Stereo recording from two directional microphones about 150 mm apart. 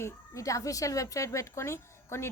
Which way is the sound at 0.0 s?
20° left (ahead or behind).